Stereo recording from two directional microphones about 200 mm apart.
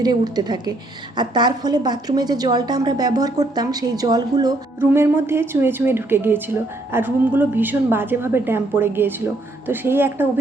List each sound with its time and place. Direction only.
0.0 s a woman's voice: 20° right (ahead or behind)